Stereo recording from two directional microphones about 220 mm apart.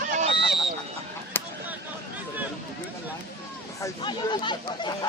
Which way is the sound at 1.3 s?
10° left (ahead or behind).